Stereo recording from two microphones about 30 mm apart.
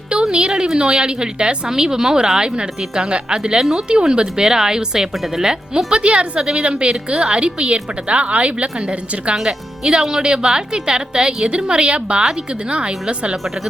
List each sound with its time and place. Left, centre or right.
0.1 s a sound: right
0.8 s a woman's voice: right
6.0 s a woman's voice: right
9.3 s a woman's voice: right